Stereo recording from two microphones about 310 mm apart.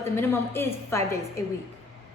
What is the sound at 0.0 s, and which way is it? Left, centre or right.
A woman's voice, centre.